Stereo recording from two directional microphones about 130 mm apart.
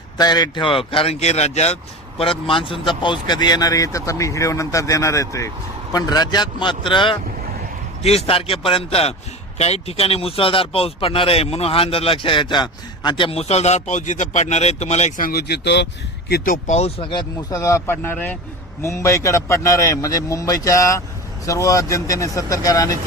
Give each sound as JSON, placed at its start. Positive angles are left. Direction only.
{"t": 0.2, "sound": "speech", "side_deg": 30}
{"t": 8.0, "sound": "speech", "side_deg": 50}
{"t": 16.4, "sound": "speech", "side_deg": 80}
{"t": 17.0, "sound": "speech", "side_deg": 35}
{"t": 17.6, "sound": "speech", "side_deg": 25}